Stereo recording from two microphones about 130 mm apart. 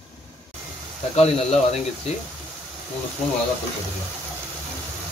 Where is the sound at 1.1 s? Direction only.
55° left (ahead or behind).